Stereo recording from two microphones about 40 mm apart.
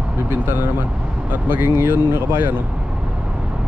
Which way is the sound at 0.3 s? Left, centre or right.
Right.